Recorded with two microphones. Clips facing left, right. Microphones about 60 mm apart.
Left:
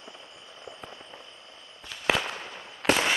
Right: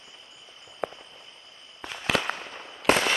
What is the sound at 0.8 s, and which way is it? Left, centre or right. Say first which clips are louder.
Fireworks: right 14 dB; right.